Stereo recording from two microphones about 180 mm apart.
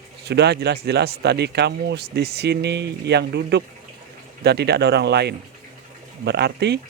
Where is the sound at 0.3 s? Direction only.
70° right (ahead or behind).